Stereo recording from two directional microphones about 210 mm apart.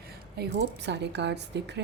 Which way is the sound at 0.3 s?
55° right (ahead or behind).